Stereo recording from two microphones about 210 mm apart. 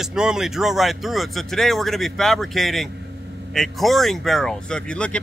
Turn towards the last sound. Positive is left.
turn(degrees=5)  # may be behind; listen again after turning